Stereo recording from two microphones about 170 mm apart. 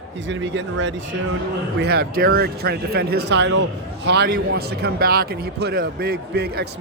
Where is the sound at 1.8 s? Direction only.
65° right (ahead or behind); by 3.6 s 90° right.